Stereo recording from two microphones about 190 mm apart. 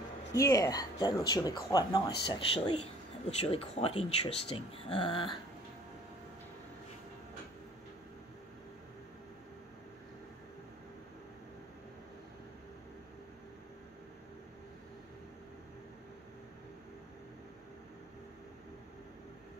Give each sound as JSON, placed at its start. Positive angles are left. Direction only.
{"t": 0.3, "sound": "speech", "side_deg": 15}